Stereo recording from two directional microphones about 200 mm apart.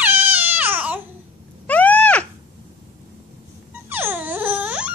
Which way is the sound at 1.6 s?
10° left (ahead or behind).